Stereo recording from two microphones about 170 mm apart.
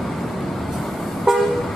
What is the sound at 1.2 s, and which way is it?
Toot, centre (ahead or behind).